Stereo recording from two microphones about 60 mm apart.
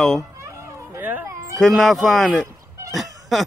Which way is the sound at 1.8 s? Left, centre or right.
Centre.